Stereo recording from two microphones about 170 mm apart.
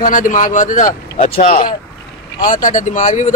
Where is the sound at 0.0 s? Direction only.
50° left (ahead or behind).